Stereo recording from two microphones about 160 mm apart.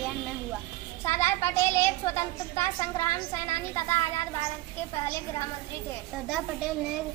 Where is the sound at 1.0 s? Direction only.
15° left (ahead or behind).